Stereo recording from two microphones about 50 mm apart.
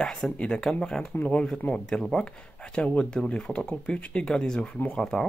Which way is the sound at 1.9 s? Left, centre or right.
Centre.